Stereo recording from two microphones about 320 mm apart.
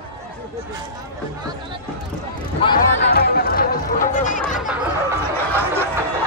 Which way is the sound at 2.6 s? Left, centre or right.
Centre.